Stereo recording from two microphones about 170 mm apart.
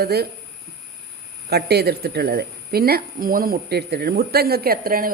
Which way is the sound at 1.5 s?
70° right (ahead or behind).